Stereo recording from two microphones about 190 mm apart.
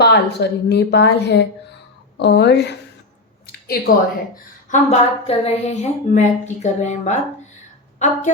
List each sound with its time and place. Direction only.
0.0 s a woman's voice: 60° left (ahead or behind)
3.4 s a sound: 55° left (ahead or behind)
4.7 s a woman's voice: 35° left (ahead or behind)